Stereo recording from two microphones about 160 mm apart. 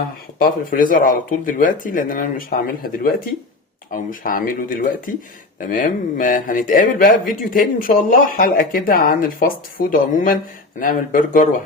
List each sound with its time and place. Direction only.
0.3 s speech: 65° left (ahead or behind)